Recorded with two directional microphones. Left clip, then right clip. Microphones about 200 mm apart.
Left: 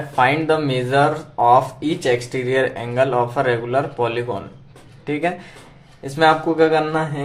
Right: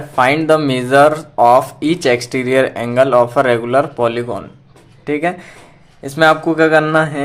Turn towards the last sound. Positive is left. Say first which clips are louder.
# right 7 dB
turn(degrees=-40)  # may be behind; listen again after turning